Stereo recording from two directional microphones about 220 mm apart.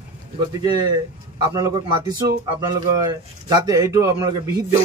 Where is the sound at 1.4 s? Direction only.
20° right (ahead or behind).